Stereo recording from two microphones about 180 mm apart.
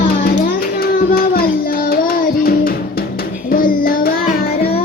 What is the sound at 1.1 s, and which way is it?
Child singing, 55° left (ahead or behind).